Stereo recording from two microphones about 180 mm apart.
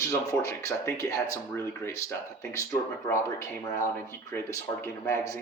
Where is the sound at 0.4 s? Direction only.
15° left (ahead or behind).